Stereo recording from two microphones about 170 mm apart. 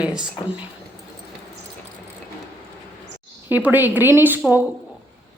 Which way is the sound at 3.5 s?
10° right (ahead or behind).